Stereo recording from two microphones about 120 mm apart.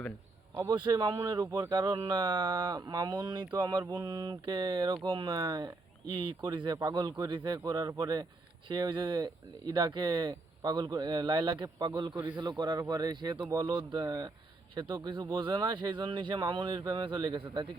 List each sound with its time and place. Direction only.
0.7 s speech: 40° right (ahead or behind)